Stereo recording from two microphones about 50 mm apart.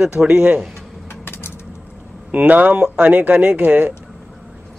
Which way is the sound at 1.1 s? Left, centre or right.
Left.